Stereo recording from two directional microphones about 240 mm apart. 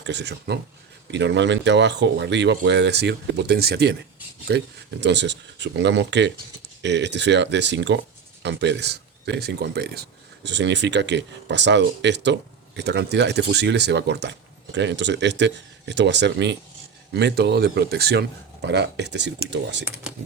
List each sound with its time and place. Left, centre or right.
0.0 s speech: right
20.1 s typing: centre